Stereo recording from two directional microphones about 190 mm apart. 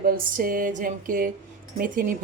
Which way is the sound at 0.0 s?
50° right (ahead or behind).